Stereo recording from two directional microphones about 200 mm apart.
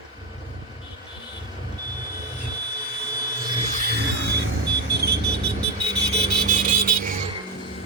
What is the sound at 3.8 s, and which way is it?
Music, 55° right (ahead or behind).